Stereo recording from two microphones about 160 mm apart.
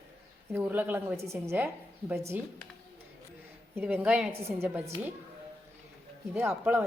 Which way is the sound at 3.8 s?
10° right (ahead or behind).